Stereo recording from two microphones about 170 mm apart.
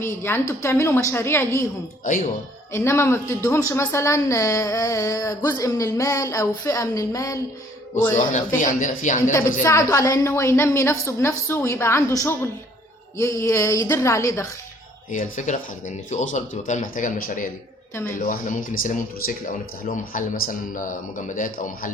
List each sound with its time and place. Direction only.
0.0 s a woman's voice: 15° left (ahead or behind)
2.7 s a woman's voice: 15° left (ahead or behind)
8.1 s a man's voice: 50° left (ahead or behind)
9.3 s a woman's voice: 15° left (ahead or behind)
15.1 s a man's voice: 50° left (ahead or behind)
17.9 s a woman's voice: 15° left (ahead or behind)
18.3 s a man's voice: 50° left (ahead or behind)